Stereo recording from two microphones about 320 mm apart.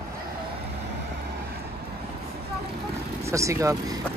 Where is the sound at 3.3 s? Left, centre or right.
Centre.